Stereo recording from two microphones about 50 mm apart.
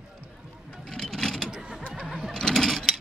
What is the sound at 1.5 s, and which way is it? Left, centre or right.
Mechanisms, centre.